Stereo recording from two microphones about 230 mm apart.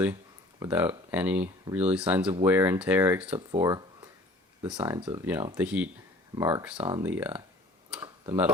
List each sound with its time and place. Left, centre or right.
0.6 s speech: centre
3.6 s a sound: centre
4.6 s speech: centre
7.0 s speech: centre
7.9 s tick-tock: centre